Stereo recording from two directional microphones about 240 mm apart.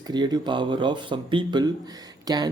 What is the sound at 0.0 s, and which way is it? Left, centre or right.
Speech, centre.